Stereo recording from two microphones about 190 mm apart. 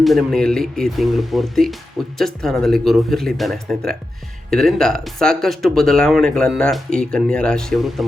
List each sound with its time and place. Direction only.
0.0 s speech: centre (ahead or behind)